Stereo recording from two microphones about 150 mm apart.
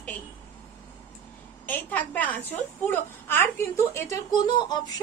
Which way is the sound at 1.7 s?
10° left (ahead or behind).